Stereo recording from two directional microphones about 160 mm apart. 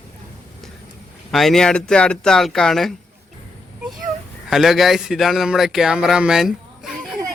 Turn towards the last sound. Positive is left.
turn(degrees=0)  # may be behind; listen again after turning